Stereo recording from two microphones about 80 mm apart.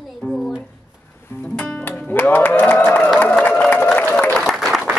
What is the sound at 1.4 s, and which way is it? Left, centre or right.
Music, centre.